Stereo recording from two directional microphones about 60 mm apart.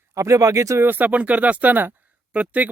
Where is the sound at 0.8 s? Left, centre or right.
Right.